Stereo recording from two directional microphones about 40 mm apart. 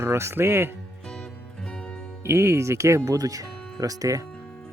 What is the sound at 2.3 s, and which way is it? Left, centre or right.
Speech, right.